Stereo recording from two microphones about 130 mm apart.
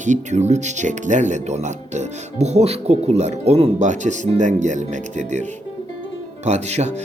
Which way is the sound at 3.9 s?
70° right (ahead or behind).